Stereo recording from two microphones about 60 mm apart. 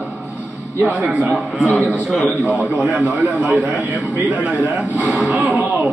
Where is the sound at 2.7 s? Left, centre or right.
Right.